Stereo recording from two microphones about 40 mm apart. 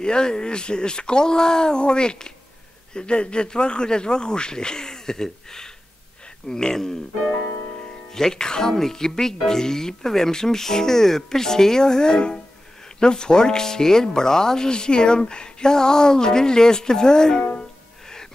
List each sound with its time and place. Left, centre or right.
0.0 s speech: centre
8.1 s speech: centre
18.0 s gasp: centre